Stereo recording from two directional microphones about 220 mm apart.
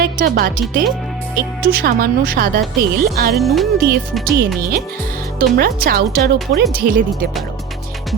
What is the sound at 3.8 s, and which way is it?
Speech, 45° right (ahead or behind).